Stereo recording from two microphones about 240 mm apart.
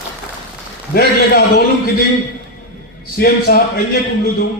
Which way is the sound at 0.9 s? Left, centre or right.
Left.